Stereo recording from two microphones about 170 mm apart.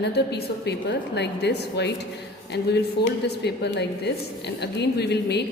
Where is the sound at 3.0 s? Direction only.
75° left (ahead or behind).